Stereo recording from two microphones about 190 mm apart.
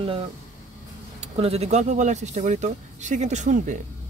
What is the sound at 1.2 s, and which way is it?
Speech, 30° right (ahead or behind).